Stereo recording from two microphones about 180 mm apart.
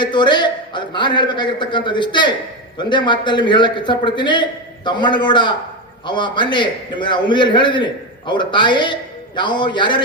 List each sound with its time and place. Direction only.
0.0 s a man's voice: 25° left (ahead or behind)